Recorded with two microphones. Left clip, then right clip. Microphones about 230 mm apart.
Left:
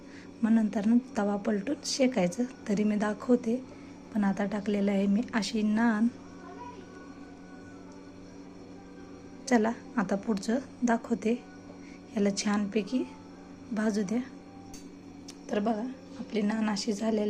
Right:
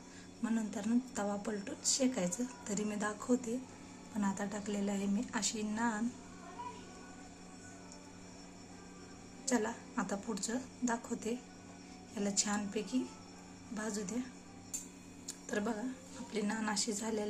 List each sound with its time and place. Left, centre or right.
0.4 s a woman's voice: centre
9.5 s a woman's voice: centre
15.4 s a woman's voice: centre